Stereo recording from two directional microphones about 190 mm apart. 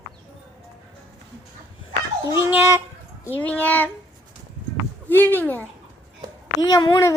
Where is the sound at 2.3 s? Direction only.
15° right (ahead or behind).